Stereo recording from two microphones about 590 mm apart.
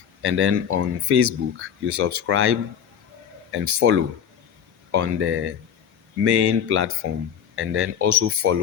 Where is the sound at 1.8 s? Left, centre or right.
Right.